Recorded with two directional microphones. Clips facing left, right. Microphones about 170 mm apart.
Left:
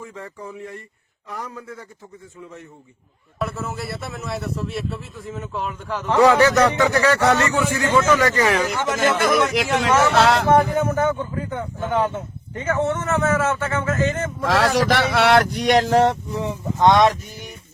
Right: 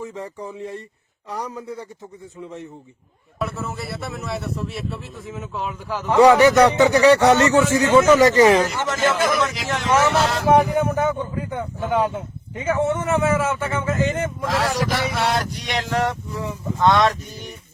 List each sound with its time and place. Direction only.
0.0 s a sound: 20° right (ahead or behind)
3.3 s speech: centre (ahead or behind)
6.1 s speech: 15° right (ahead or behind)
8.1 s a sound: 20° right (ahead or behind)
8.6 s speech: 15° left (ahead or behind)
9.6 s speech: 65° left (ahead or behind)
10.5 s speech: 15° right (ahead or behind)
11.8 s speech: 5° right (ahead or behind)
14.4 s speech: 80° left; by 16.1 s 35° left (ahead or behind)
16.3 s speech: 25° left (ahead or behind)